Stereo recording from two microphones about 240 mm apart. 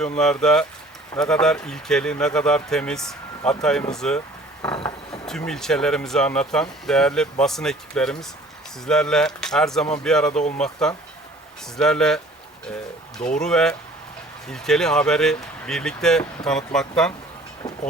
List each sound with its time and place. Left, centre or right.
0.0 s speech: centre
4.6 s a sound: centre
5.5 s speech: centre
13.4 s speech: centre